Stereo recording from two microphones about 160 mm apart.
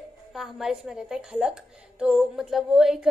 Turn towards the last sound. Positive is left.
turn(degrees=-5)  # may be behind; listen again after turning